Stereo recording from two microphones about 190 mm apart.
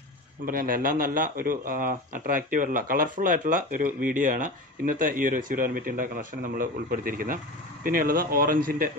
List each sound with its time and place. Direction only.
0.5 s speech: 50° right (ahead or behind)